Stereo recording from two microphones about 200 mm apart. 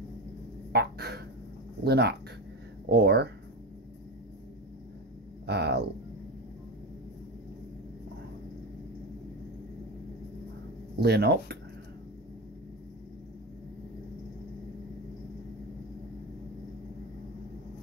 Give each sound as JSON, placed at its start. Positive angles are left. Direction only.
{"t": 0.7, "sound": "fowl", "side_deg": -55}
{"t": 1.9, "sound": "speech", "side_deg": -55}
{"t": 5.5, "sound": "speech", "side_deg": -55}
{"t": 11.0, "sound": "speech", "side_deg": -55}